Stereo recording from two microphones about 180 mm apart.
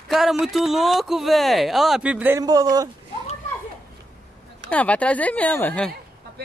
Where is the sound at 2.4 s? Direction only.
20° right (ahead or behind).